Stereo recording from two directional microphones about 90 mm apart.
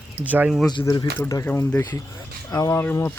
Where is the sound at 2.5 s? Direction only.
40° left (ahead or behind).